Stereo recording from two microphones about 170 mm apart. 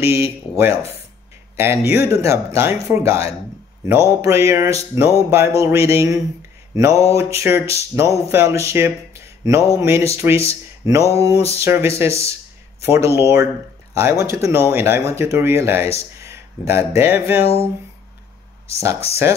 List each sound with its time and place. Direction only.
0.0 s speech: 15° right (ahead or behind)
6.7 s mantra: 20° right (ahead or behind)
7.1 s speech: 20° right (ahead or behind)
11.1 s music: 20° right (ahead or behind)
11.5 s speech: 15° right (ahead or behind)